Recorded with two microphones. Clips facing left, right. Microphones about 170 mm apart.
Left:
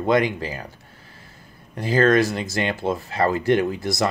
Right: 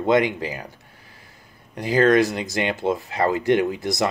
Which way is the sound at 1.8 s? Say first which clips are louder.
Right 1 dB; 20° right (ahead or behind).